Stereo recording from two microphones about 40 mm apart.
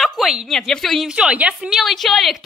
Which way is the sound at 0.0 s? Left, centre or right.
Centre.